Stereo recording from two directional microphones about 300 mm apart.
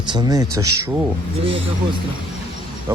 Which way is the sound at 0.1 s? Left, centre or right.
Centre.